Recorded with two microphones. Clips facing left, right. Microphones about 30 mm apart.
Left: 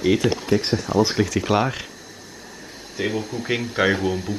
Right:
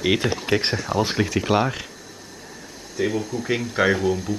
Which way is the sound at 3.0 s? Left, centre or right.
Centre.